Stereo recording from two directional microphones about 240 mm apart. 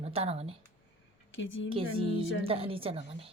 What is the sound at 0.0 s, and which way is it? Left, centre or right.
Speech, right.